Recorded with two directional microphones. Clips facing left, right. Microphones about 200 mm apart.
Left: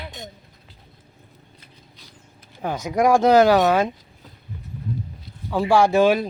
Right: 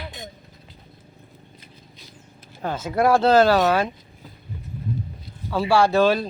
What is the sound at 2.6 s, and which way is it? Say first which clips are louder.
Speech: left 1 dB; 15° left (ahead or behind).